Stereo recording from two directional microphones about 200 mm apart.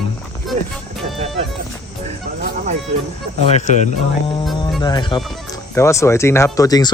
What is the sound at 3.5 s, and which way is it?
Speech, 35° left (ahead or behind).